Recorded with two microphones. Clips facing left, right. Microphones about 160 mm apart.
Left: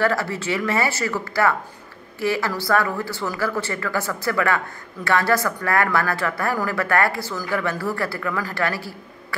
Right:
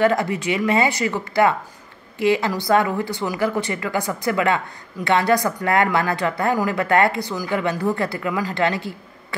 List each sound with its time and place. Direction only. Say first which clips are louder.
0.0 s speech: right 3 dB; 20° right (ahead or behind)